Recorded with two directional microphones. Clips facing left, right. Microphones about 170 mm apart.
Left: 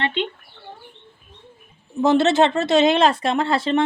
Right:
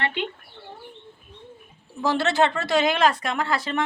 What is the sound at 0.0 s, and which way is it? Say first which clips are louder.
Speech: left 4 dB; 25° left (ahead or behind).